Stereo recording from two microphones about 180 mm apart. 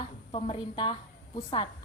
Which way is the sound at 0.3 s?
30° left (ahead or behind).